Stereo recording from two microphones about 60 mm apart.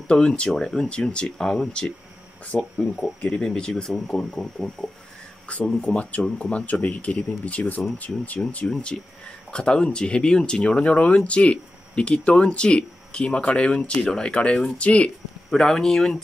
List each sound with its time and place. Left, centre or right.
0.1 s speech: centre
5.5 s speech: centre
8.9 s speech: centre
15.5 s speech: centre